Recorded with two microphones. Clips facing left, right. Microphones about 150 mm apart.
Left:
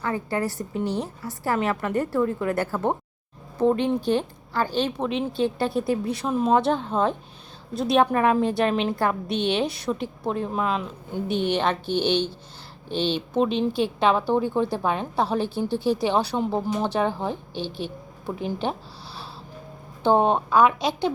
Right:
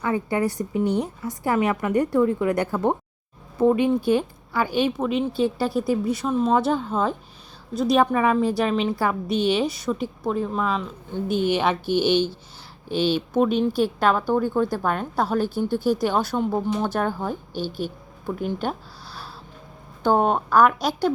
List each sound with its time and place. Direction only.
0.0 s a woman's voice: 15° right (ahead or behind)
14.3 s speech: 20° left (ahead or behind)
14.8 s a woman's voice: centre (ahead or behind)
15.4 s speech: 30° left (ahead or behind)
16.1 s a woman's voice: centre (ahead or behind)
17.5 s speech: 25° left (ahead or behind)
18.3 s a woman's voice: centre (ahead or behind)
20.1 s a woman's voice: 5° right (ahead or behind)
20.6 s speech: 25° left (ahead or behind)